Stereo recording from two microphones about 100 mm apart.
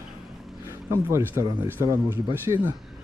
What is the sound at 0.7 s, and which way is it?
Speech, 25° right (ahead or behind).